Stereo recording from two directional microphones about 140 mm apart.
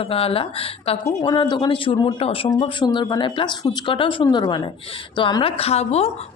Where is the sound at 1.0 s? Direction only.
30° left (ahead or behind).